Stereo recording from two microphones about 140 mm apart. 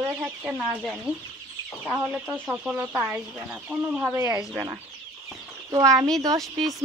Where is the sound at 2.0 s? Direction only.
10° right (ahead or behind).